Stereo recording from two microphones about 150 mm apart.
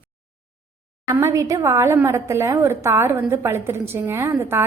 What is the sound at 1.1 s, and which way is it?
A woman's voice, 20° right (ahead or behind).